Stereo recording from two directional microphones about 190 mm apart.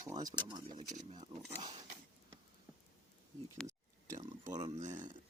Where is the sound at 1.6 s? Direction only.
20° right (ahead or behind).